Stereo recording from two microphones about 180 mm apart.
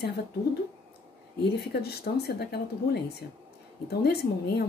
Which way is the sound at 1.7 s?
60° left (ahead or behind).